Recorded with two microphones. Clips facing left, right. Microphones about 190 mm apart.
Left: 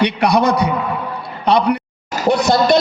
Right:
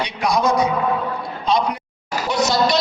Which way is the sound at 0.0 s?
65° left (ahead or behind).